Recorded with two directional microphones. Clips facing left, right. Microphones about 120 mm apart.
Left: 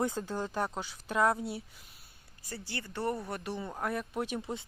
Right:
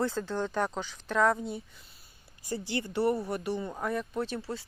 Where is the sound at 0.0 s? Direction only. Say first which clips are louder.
Right 2 dB; 15° left (ahead or behind).